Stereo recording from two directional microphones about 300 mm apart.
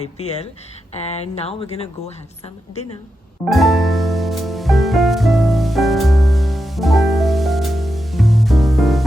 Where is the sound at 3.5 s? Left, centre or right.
Centre.